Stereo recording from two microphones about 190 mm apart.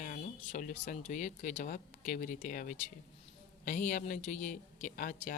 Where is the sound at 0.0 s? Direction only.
45° left (ahead or behind).